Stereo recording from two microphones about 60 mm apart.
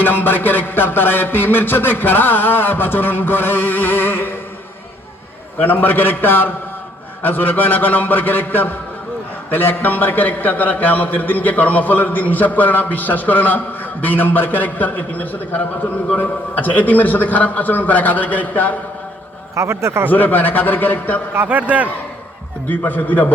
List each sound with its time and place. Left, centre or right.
0.0 s a man's voice: left
5.6 s a man's voice: left
19.5 s a man's voice: right
20.1 s a man's voice: left
21.3 s a man's voice: right
22.7 s a man's voice: left